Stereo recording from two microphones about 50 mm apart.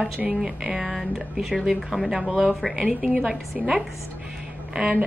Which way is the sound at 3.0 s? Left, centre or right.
Centre.